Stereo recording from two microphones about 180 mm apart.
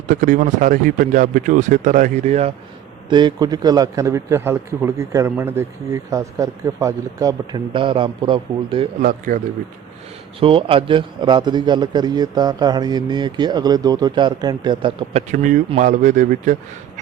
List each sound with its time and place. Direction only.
0.1 s speech: 45° right (ahead or behind)
3.1 s a man's voice: 25° right (ahead or behind)
9.0 s speech: 50° right (ahead or behind)
10.4 s a man's voice: 30° right (ahead or behind)
15.3 s speech: 45° right (ahead or behind)